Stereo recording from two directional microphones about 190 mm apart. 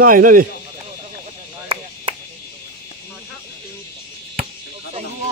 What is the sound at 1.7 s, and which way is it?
Chop, 30° right (ahead or behind).